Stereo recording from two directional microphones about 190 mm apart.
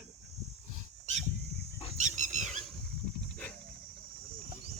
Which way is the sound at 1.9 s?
40° right (ahead or behind).